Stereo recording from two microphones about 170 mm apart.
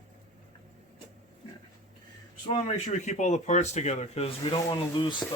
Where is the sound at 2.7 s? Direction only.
45° left (ahead or behind).